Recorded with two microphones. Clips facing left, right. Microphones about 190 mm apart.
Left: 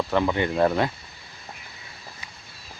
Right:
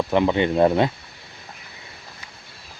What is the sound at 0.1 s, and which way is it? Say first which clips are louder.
Speech: right 6 dB; 20° right (ahead or behind).